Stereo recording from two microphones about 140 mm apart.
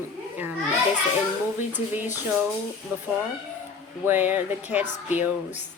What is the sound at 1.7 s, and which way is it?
A woman's voice, 15° right (ahead or behind).